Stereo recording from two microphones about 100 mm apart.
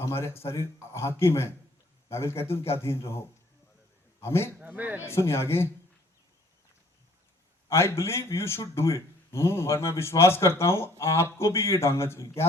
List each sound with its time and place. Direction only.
0.0 s speech: 25° left (ahead or behind)
4.6 s a man's voice: 15° right (ahead or behind)
5.0 s speech: 25° left (ahead or behind)
7.7 s speech: 25° left (ahead or behind)